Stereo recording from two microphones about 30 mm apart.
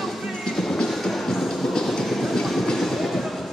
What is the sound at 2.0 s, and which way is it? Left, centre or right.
Train, centre.